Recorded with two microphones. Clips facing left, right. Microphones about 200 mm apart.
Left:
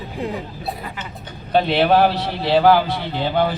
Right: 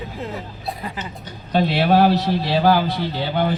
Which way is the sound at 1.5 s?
55° left (ahead or behind).